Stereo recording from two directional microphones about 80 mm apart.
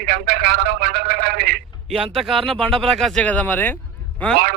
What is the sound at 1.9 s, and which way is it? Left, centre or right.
Speech, centre.